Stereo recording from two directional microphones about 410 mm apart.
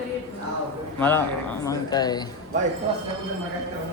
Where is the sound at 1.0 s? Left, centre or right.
Centre.